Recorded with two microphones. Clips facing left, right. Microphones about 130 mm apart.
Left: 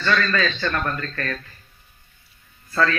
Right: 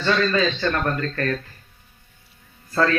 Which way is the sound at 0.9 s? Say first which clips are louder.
Right 4 dB; 30° right (ahead or behind).